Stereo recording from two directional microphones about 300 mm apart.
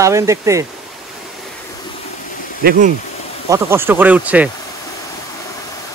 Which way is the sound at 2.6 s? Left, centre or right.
Right.